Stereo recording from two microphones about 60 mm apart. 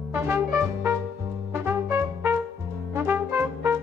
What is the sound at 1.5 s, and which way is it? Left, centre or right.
Music, right.